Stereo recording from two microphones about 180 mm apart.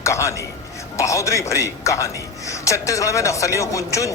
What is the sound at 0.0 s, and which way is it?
A man's voice, 15° left (ahead or behind).